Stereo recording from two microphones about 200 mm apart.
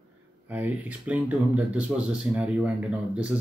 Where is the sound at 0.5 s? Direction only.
5° right (ahead or behind).